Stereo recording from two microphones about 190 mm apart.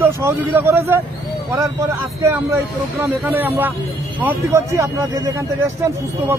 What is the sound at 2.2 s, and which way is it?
A man's voice, 15° right (ahead or behind).